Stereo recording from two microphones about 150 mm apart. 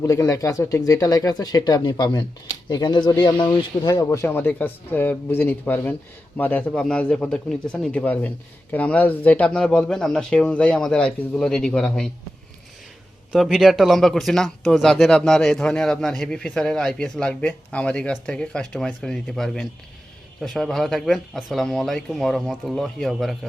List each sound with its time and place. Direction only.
0.0 s speech: 20° left (ahead or behind); by 12.1 s 5° left (ahead or behind)
13.3 s speech: centre (ahead or behind)